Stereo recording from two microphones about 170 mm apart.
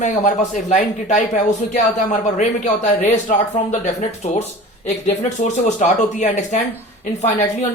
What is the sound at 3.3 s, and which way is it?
Speech, 50° left (ahead or behind).